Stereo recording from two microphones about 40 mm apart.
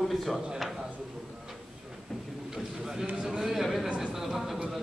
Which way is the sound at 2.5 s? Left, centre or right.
Centre.